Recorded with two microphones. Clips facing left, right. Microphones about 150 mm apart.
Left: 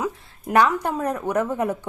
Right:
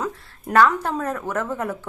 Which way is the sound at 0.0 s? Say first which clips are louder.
Left 1 dB; 10° left (ahead or behind).